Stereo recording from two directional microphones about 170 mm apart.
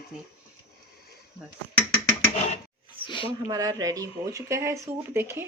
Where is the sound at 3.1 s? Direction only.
30° left (ahead or behind).